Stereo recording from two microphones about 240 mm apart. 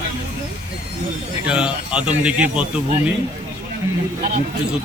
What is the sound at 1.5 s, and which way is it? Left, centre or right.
Speech, centre.